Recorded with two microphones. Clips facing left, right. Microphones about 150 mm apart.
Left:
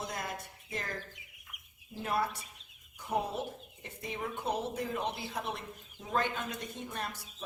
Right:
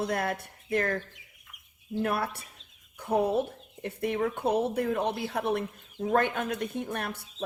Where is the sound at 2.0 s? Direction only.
65° right (ahead or behind).